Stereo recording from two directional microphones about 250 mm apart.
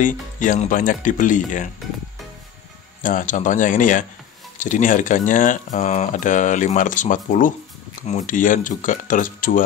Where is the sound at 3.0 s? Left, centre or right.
Left.